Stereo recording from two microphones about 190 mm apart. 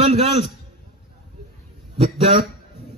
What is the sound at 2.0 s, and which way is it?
Speech, 35° right (ahead or behind).